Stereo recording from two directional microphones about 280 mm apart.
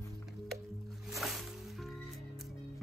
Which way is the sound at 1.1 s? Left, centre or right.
Centre.